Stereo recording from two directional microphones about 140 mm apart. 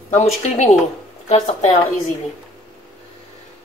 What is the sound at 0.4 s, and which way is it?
A woman's voice, 55° left (ahead or behind).